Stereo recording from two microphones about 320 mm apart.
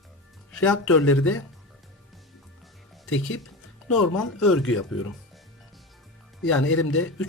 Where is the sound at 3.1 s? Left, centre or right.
Left.